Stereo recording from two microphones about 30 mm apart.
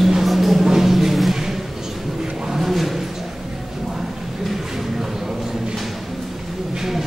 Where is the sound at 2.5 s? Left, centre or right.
Centre.